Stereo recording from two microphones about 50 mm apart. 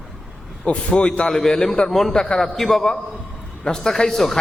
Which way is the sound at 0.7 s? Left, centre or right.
Left.